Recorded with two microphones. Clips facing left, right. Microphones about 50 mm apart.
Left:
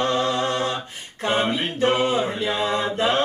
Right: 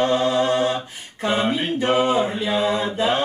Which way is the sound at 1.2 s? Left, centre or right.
Left.